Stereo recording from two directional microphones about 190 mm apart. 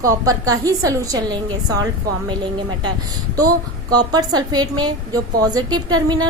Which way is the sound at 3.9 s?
20° right (ahead or behind).